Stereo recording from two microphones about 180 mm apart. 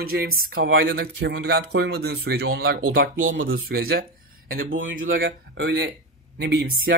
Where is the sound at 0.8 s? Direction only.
65° right (ahead or behind); by 3.4 s 45° right (ahead or behind).